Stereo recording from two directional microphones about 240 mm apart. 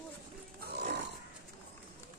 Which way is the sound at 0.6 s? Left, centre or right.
Right.